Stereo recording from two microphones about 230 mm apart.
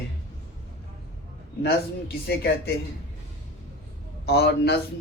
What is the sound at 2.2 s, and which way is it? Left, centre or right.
Speech, left.